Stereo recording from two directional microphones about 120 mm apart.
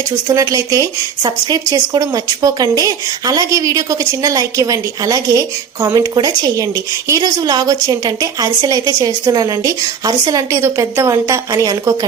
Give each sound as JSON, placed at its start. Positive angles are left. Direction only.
{"t": 0.3, "sound": "a woman's voice", "side_deg": -30}